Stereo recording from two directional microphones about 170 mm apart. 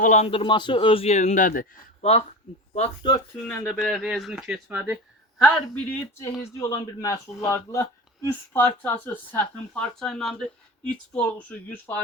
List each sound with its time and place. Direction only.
0.0 s a man's voice: 40° left (ahead or behind)
3.0 s speech: 25° left (ahead or behind)
3.6 s speech: centre (ahead or behind)
5.4 s speech: 5° left (ahead or behind)
6.4 s speech: 15° left (ahead or behind)